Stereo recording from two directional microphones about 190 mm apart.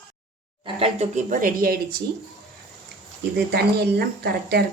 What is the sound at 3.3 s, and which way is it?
A woman's voice, 60° right (ahead or behind).